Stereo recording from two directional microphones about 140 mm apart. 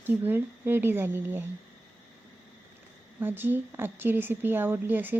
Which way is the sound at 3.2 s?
15° right (ahead or behind).